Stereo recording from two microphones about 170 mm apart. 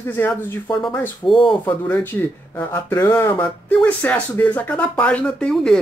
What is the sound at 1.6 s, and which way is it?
Speech, 10° left (ahead or behind).